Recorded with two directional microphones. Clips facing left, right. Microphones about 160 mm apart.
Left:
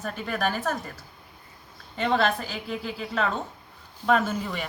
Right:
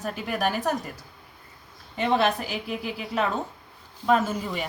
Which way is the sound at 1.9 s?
15° right (ahead or behind).